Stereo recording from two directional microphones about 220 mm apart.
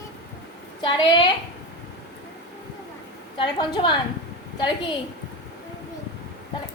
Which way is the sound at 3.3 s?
20° left (ahead or behind).